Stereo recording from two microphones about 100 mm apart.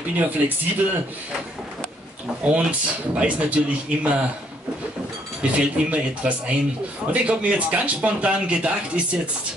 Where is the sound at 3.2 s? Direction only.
15° right (ahead or behind).